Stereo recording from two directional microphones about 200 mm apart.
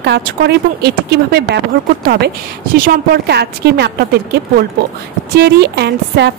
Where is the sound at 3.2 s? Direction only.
55° right (ahead or behind).